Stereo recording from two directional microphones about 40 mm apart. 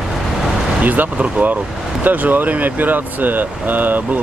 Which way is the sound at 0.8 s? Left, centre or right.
Right.